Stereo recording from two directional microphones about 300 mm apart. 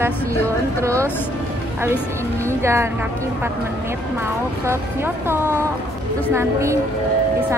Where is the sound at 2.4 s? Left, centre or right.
Centre.